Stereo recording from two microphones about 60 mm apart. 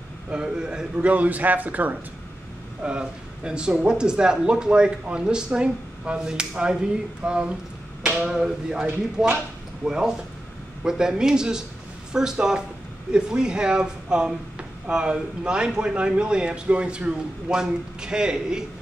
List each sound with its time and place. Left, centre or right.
0.3 s a man's voice: centre
2.8 s speech: centre
8.8 s a man's voice: right
9.8 s speech: centre